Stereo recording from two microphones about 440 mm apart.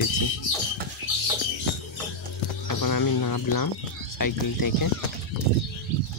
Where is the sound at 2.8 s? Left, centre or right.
Left.